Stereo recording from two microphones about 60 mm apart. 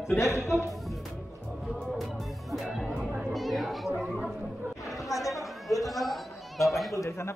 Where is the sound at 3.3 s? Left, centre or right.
Centre.